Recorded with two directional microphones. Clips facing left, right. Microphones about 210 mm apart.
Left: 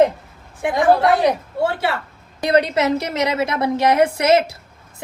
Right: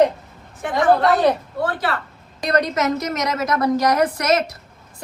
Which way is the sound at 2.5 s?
30° left (ahead or behind).